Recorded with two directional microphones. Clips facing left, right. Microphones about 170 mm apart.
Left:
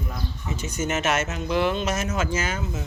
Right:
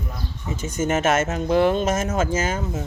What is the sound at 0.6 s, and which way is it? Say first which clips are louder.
Speech: right 5 dB; 50° right (ahead or behind).